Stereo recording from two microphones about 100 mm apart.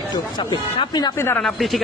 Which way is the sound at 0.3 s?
45° left (ahead or behind).